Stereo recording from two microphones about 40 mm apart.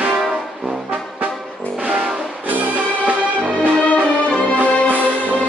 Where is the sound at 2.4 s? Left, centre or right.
Right.